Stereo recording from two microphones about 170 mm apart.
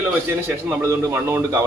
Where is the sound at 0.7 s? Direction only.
15° right (ahead or behind).